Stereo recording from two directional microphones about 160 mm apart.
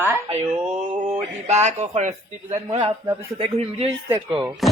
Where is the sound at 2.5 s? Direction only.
35° right (ahead or behind).